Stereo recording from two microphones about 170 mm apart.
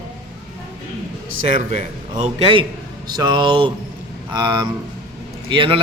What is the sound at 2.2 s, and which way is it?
A man's voice, 35° right (ahead or behind).